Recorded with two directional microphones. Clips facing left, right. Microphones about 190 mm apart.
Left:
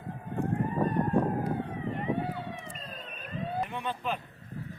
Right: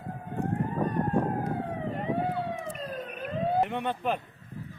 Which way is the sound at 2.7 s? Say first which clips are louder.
Right 8 dB; 75° right (ahead or behind).